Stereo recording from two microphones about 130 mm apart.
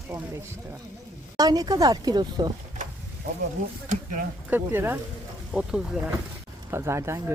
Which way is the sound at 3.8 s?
90° right.